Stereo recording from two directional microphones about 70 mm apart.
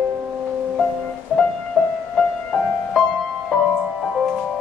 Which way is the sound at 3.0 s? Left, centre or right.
Centre.